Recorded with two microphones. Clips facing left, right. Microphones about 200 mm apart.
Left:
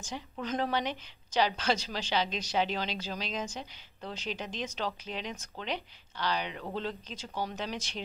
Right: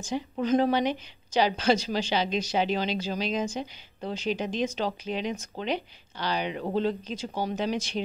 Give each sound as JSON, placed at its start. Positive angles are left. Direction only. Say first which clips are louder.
{"t": 0.1, "sound": "a woman's voice", "louder": "right 10 dB", "side_deg": -10}
{"t": 7.2, "sound": "speech", "louder": "right 5 dB", "side_deg": -30}
{"t": 7.5, "sound": "a woman's voice", "louder": "right 9 dB", "side_deg": -10}